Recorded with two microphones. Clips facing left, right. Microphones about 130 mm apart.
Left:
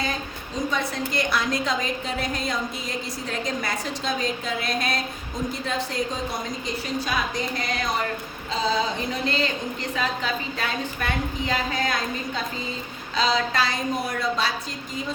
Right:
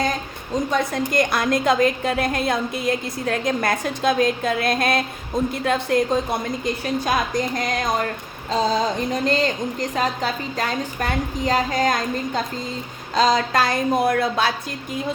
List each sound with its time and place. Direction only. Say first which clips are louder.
0.7 s a woman's voice: right 6 dB; 45° right (ahead or behind)
6.8 s a woman's voice: right 4 dB; 45° right (ahead or behind)